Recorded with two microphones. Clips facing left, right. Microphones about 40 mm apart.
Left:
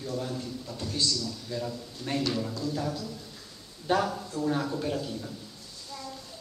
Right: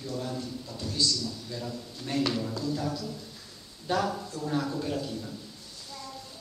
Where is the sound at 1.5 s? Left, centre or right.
Centre.